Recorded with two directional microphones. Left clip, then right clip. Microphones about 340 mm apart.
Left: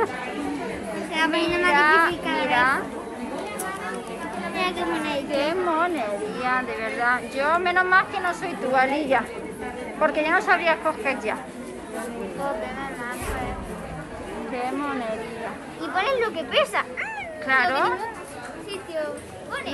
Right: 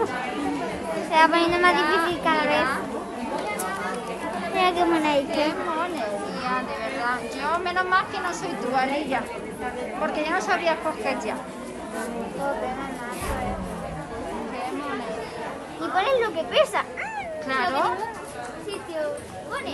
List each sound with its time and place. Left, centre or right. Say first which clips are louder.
1.1 s a woman's voice: right 4 dB; right
1.8 s speech: left 4 dB; centre
4.6 s a woman's voice: right 5 dB; centre
5.3 s speech: left 2 dB; centre
16.0 s a woman's voice: right 1 dB; right
17.5 s speech: left 4 dB; centre